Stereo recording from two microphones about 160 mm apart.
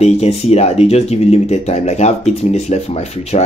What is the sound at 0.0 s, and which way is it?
Speech, 40° left (ahead or behind).